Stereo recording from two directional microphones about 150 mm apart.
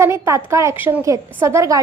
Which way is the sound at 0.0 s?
20° right (ahead or behind).